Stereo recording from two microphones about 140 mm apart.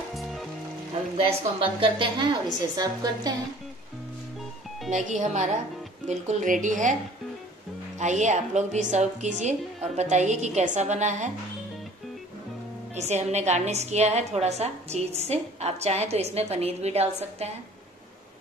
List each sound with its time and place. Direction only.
0.1 s music: centre (ahead or behind)
1.6 s a woman's voice: 40° right (ahead or behind)
4.9 s a woman's voice: 60° right (ahead or behind)
8.0 s a woman's voice: 55° right (ahead or behind)
12.9 s a woman's voice: 55° right (ahead or behind)